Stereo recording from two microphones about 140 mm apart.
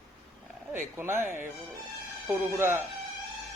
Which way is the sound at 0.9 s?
15° right (ahead or behind).